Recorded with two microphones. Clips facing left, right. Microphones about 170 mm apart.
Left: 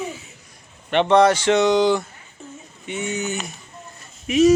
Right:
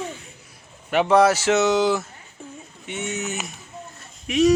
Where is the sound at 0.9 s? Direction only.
5° right (ahead or behind).